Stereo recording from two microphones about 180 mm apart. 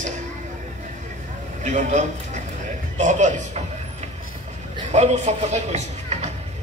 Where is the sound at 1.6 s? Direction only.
40° right (ahead or behind).